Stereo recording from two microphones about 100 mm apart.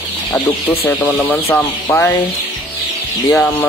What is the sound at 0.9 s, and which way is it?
Speech, 15° left (ahead or behind).